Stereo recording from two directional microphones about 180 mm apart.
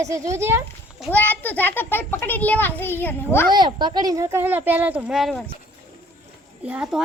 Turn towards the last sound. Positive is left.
turn(degrees=-5)  # may be behind; listen again after turning